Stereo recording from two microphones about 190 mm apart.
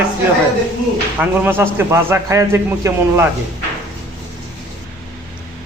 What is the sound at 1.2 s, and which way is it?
A man's voice, 10° right (ahead or behind).